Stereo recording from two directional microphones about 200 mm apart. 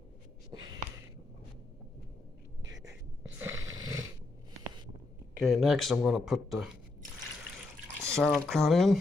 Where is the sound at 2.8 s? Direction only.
15° right (ahead or behind).